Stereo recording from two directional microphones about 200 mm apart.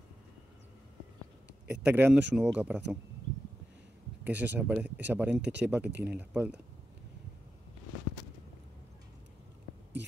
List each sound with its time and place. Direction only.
1.7 s speech: 5° right (ahead or behind)
4.2 s speech: 10° right (ahead or behind)
10.0 s a sound: 60° right (ahead or behind)